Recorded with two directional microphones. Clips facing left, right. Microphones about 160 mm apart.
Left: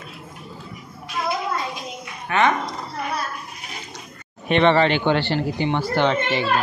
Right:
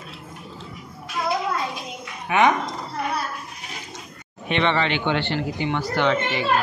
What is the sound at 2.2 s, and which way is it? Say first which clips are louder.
Speech: right 1 dB; 15° right (ahead or behind).